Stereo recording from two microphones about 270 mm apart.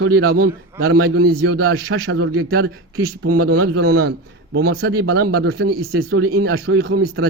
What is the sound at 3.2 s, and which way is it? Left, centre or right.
Speech, right.